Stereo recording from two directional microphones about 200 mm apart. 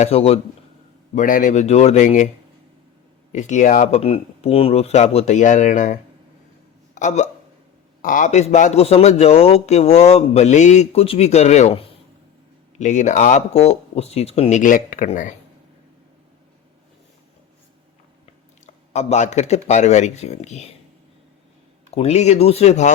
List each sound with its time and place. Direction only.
0.0 s speech: 30° left (ahead or behind)
1.1 s speech: 40° left (ahead or behind)
3.3 s speech: 35° left (ahead or behind)
18.6 s speech: 35° left (ahead or behind)
21.8 s speech: 30° left (ahead or behind)